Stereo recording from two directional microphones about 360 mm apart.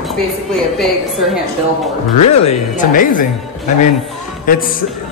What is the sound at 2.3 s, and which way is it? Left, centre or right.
Speech, centre.